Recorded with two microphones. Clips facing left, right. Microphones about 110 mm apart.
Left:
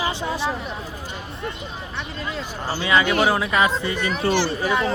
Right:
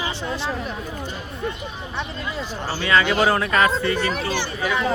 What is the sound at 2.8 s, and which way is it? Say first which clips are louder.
Speech: even; 15° left (ahead or behind).